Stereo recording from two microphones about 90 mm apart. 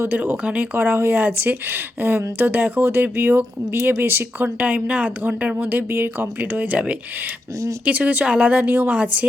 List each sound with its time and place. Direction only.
0.0 s speech: 20° right (ahead or behind)